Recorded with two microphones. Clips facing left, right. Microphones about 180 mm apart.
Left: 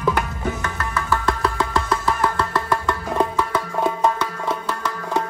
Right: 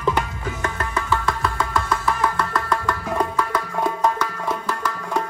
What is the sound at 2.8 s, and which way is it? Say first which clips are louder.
Music: left 2 dB; 25° left (ahead or behind).